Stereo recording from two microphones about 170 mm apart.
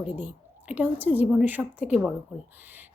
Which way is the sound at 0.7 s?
10° right (ahead or behind).